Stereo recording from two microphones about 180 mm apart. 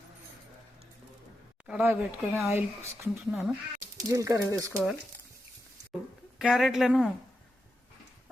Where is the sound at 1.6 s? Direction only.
10° right (ahead or behind).